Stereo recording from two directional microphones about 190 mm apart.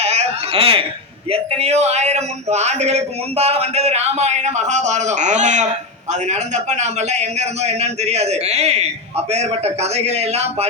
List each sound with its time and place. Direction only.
0.0 s a man's voice: 35° right (ahead or behind)